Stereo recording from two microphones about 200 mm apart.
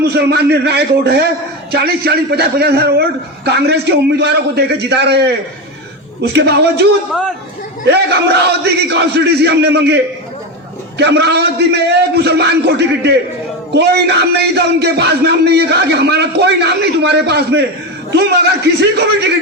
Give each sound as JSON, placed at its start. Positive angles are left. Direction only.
{"t": 0.0, "sound": "a man's voice", "side_deg": -55}
{"t": 6.2, "sound": "a man's voice", "side_deg": -55}
{"t": 7.9, "sound": "a man's voice", "side_deg": -55}